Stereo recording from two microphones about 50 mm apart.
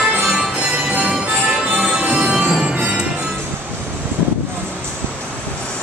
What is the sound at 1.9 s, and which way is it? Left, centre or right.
Music, right.